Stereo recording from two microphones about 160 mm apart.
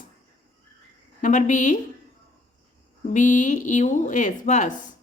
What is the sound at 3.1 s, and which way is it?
Speech, 55° left (ahead or behind).